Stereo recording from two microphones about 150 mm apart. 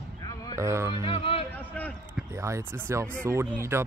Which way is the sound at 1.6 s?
10° left (ahead or behind).